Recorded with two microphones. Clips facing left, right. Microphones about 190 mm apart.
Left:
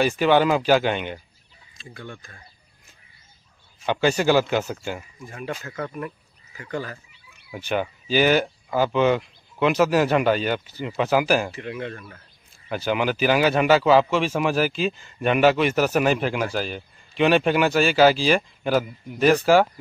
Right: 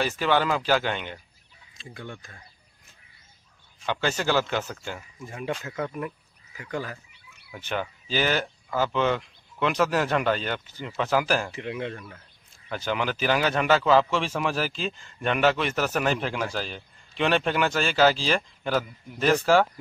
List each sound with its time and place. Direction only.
0.0 s a man's voice: 15° left (ahead or behind)
1.8 s speech: 20° right (ahead or behind)
3.8 s a man's voice: 15° left (ahead or behind)
5.6 s speech: 15° right (ahead or behind)
7.5 s a man's voice: 15° left (ahead or behind)
11.5 s speech: 20° right (ahead or behind)
12.6 s a man's voice: 10° left (ahead or behind)